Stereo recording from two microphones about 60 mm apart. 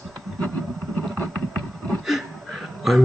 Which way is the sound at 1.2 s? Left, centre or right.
Left.